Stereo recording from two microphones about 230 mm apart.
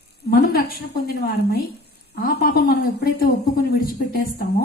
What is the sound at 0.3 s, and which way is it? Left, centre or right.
A woman's voice, left.